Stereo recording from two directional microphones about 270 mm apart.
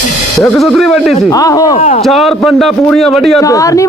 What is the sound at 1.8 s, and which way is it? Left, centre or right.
Speech, left.